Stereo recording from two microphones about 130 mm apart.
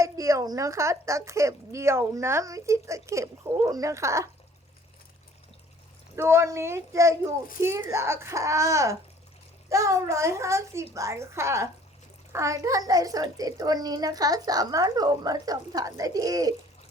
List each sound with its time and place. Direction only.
0.0 s speech: 25° right (ahead or behind)
6.1 s a child's voice: 20° right (ahead or behind)